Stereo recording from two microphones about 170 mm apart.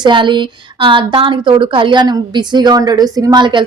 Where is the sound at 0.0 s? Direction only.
25° right (ahead or behind).